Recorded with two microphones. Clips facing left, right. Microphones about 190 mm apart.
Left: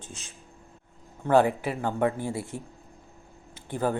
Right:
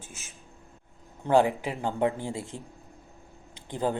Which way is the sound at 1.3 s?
15° right (ahead or behind).